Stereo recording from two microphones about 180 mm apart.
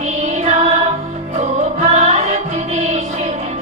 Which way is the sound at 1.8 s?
40° right (ahead or behind).